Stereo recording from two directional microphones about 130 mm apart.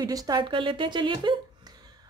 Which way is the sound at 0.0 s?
25° right (ahead or behind).